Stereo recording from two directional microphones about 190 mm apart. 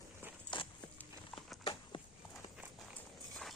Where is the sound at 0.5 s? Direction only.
25° left (ahead or behind).